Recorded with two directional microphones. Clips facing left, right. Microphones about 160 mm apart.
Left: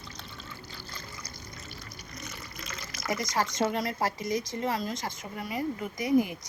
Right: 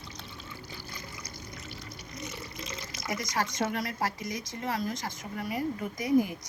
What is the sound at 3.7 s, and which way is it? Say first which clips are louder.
Speech: left 2 dB; 25° left (ahead or behind).